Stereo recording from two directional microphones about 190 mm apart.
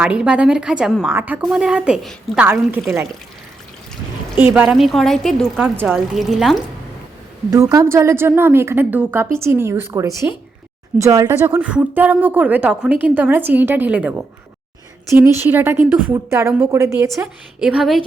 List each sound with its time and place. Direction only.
0.0 s a woman's voice: 5° right (ahead or behind)
4.4 s a woman's voice: 10° right (ahead or behind)
5.5 s a woman's voice: 10° right (ahead or behind)
7.5 s a woman's voice: 15° right (ahead or behind)
17.2 s a woman's voice: 5° right (ahead or behind)